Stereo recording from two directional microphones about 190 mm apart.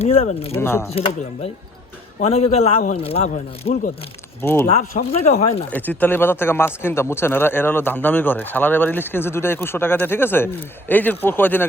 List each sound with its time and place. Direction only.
0.0 s speech: 35° left (ahead or behind)
0.5 s a man's voice: 10° left (ahead or behind)
0.9 s speech: 30° left (ahead or behind)
4.4 s a man's voice: 10° left (ahead or behind)
4.8 s speech: 40° left (ahead or behind)
5.7 s a man's voice: 10° left (ahead or behind)